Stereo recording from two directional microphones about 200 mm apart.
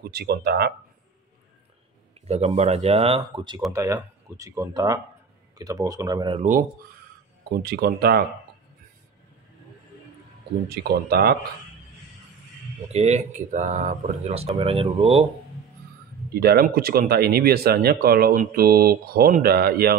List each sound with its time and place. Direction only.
0.0 s speech: 50° right (ahead or behind)
2.2 s speech: 30° right (ahead or behind)
7.5 s speech: 50° right (ahead or behind)
10.7 s speech: 50° right (ahead or behind)
12.8 s speech: 35° right (ahead or behind)
16.3 s speech: 50° right (ahead or behind)